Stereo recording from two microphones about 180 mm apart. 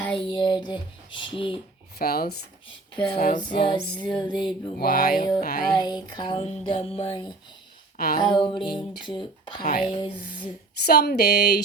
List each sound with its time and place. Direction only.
0.1 s music: 25° left (ahead or behind)
2.0 s speech: 60° left (ahead or behind)
3.1 s female singing: 40° left (ahead or behind)
3.5 s music: 25° left (ahead or behind)
4.8 s music: 50° left (ahead or behind)
5.7 s music: 25° left (ahead or behind)
7.9 s speech: 55° left (ahead or behind)
8.2 s music: 25° left (ahead or behind)
9.6 s speech: 55° left (ahead or behind)
9.9 s music: 25° left (ahead or behind)
10.8 s speech: 65° left (ahead or behind)